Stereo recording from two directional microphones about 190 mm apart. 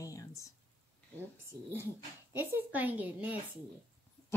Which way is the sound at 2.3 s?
10° right (ahead or behind).